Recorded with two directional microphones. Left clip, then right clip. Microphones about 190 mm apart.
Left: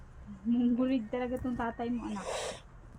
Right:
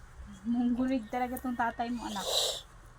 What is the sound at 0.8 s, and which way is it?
Speech, 65° right (ahead or behind).